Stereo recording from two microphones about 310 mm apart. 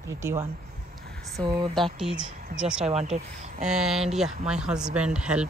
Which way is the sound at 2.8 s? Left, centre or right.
Right.